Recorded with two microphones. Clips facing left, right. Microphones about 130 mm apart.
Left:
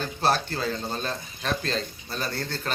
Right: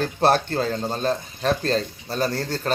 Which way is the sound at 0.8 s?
35° right (ahead or behind).